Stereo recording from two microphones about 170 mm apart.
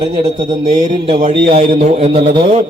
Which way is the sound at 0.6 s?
45° right (ahead or behind).